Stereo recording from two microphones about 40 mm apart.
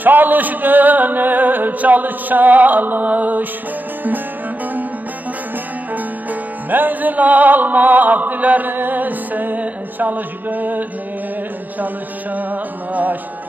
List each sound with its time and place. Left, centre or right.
0.0 s music: right
6.7 s music: right
12.4 s music: right